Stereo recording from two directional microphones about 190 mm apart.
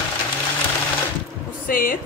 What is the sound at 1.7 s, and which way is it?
Speech, 50° left (ahead or behind).